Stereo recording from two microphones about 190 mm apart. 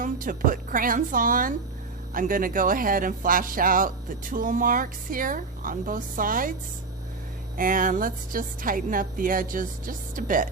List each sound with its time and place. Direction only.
0.0 s speech: 45° right (ahead or behind)
7.5 s speech: 45° right (ahead or behind)